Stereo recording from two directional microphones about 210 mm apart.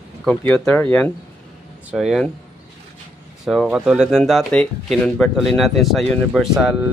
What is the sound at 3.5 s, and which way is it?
Speech, centre (ahead or behind).